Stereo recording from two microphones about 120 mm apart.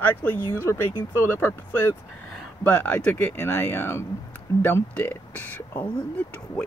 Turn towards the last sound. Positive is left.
turn(degrees=15)  # may be behind; listen again after turning